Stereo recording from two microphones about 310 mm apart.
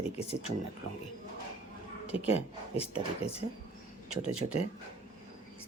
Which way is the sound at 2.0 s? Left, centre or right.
Centre.